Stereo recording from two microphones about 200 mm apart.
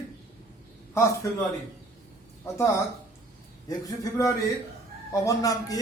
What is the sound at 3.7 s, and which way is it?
A man's voice, 20° left (ahead or behind).